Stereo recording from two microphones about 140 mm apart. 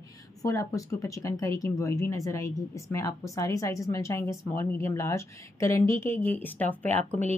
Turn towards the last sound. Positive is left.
turn(degrees=15)  # may be behind; listen again after turning